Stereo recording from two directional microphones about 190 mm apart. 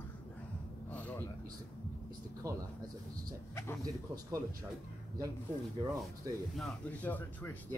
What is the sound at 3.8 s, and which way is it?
Speech, 15° right (ahead or behind).